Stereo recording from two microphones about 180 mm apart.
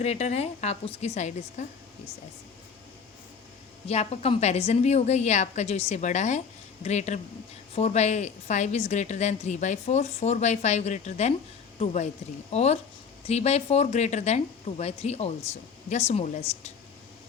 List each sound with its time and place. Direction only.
0.0 s a woman's voice: 35° left (ahead or behind)
3.8 s a woman's voice: 35° left (ahead or behind)
12.5 s a woman's voice: 35° left (ahead or behind)